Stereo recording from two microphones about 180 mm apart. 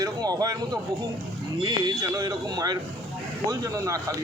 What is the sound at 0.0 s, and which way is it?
A man's voice, 20° right (ahead or behind).